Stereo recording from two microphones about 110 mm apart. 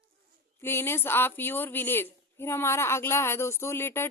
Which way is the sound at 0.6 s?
20° left (ahead or behind).